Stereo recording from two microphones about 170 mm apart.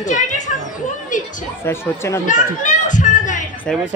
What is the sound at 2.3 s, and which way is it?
Children playing, 50° left (ahead or behind).